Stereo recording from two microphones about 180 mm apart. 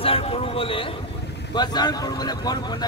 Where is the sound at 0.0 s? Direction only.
30° left (ahead or behind).